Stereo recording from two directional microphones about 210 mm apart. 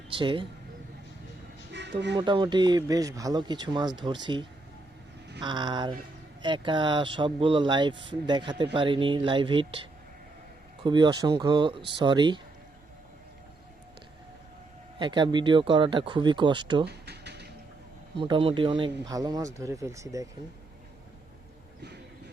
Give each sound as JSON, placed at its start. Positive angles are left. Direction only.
{"t": 0.1, "sound": "speech", "side_deg": -25}
{"t": 1.7, "sound": "music", "side_deg": -55}
{"t": 2.1, "sound": "speech", "side_deg": -20}
{"t": 10.8, "sound": "speech", "side_deg": -20}
{"t": 14.9, "sound": "speech", "side_deg": -20}
{"t": 16.8, "sound": "a sound", "side_deg": -50}
{"t": 18.2, "sound": "speech", "side_deg": -25}